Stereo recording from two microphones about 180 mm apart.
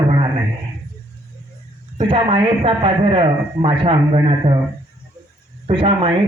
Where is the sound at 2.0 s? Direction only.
30° right (ahead or behind).